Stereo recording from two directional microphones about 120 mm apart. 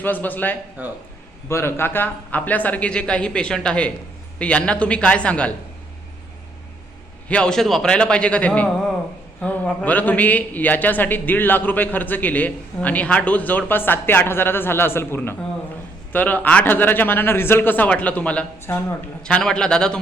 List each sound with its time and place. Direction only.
0.0 s a man's voice: 15° left (ahead or behind)
0.8 s speech: 15° right (ahead or behind)
1.5 s a man's voice: 20° left (ahead or behind)
7.3 s a man's voice: 10° left (ahead or behind)